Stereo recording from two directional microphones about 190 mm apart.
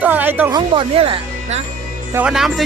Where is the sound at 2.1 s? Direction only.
5° right (ahead or behind).